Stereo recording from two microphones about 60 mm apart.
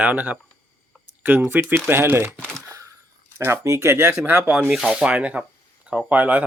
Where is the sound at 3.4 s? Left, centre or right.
Right.